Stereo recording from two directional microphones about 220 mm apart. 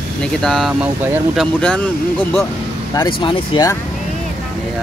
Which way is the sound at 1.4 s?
5° left (ahead or behind).